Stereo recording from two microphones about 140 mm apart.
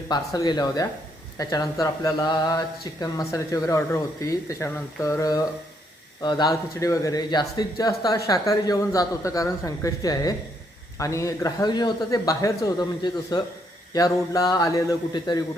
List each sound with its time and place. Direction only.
0.1 s speech: 30° left (ahead or behind)